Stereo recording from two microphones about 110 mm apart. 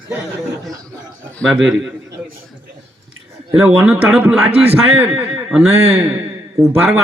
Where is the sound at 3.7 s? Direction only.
15° right (ahead or behind).